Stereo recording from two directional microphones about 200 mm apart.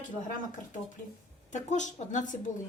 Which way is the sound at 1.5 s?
35° left (ahead or behind).